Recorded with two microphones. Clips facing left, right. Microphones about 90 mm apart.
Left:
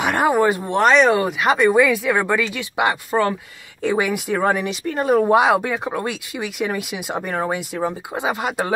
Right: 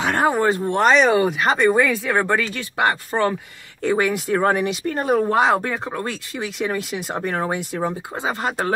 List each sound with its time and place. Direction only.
0.0 s speech: 10° left (ahead or behind)
5.2 s speech: 10° left (ahead or behind)
8.1 s speech: 10° left (ahead or behind)